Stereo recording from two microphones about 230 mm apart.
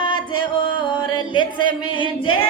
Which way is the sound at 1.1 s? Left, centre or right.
Left.